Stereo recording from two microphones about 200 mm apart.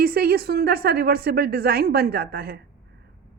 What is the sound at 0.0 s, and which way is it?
A woman's voice, 50° right (ahead or behind).